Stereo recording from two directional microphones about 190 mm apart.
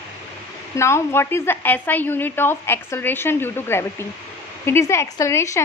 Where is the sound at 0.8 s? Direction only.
15° left (ahead or behind).